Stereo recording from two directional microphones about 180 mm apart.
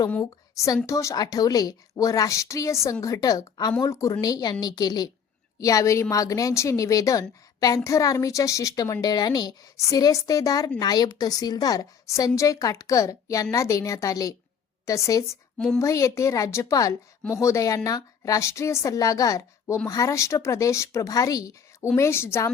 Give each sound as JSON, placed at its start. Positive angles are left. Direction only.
{"t": 0.1, "sound": "a woman's voice", "side_deg": 15}
{"t": 15.5, "sound": "a woman's voice", "side_deg": 5}
{"t": 15.8, "sound": "a woman's voice", "side_deg": 15}